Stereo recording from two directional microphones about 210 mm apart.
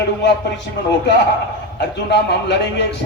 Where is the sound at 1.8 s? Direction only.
55° left (ahead or behind).